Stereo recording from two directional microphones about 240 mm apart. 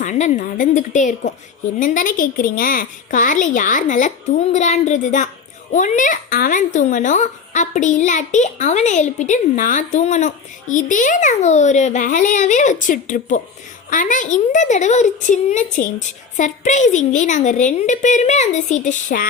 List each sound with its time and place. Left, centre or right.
0.0 s speech: left